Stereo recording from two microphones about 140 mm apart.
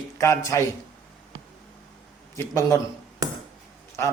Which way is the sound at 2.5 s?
20° left (ahead or behind).